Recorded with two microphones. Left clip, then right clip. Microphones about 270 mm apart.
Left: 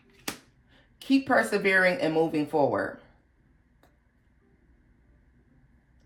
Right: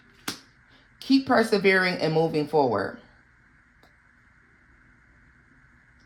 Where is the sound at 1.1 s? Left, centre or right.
Right.